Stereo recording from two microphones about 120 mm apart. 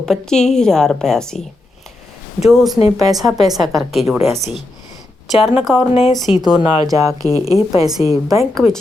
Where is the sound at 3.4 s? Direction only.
Centre (ahead or behind).